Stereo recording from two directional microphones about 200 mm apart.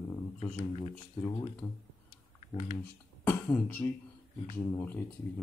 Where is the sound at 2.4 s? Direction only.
35° left (ahead or behind).